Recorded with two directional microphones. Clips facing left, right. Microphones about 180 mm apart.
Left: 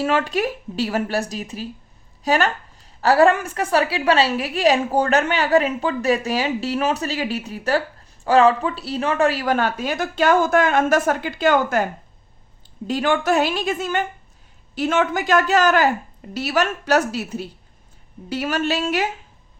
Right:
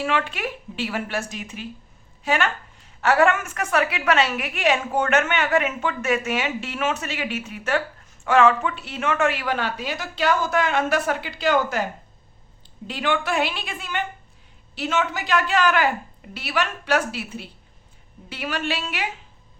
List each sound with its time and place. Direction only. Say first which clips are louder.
0.0 s a woman's voice: left 5 dB; 40° left (ahead or behind)
12.9 s a woman's voice: left 5 dB; 45° left (ahead or behind)